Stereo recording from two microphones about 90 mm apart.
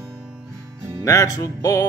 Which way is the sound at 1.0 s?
35° left (ahead or behind).